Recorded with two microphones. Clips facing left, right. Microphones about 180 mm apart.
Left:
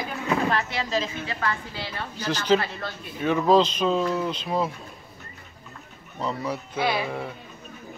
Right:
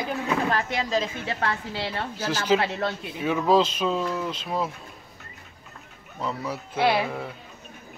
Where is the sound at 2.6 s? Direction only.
75° right (ahead or behind).